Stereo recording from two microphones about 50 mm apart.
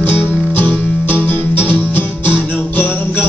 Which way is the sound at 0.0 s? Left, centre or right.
Left.